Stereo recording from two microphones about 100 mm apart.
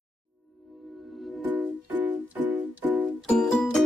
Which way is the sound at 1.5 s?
15° right (ahead or behind).